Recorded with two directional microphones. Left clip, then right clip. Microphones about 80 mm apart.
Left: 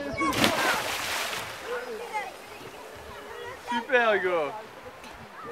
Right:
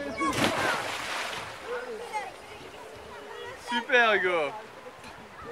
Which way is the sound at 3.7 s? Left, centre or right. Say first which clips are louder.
Right 1 dB; right.